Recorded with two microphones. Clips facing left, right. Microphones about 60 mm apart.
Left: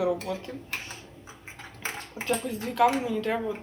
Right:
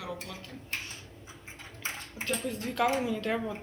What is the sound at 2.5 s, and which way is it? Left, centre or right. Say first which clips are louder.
A woman's voice: left 5 dB; centre.